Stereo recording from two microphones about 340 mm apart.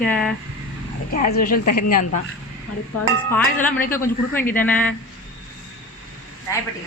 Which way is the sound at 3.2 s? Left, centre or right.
Centre.